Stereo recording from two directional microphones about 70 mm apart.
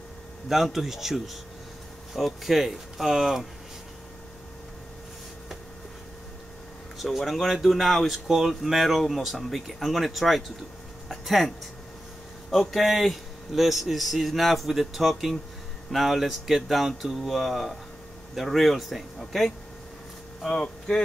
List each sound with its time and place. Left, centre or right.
0.5 s speech: centre
7.0 s speech: centre
11.1 s a sound: centre
12.4 s speech: centre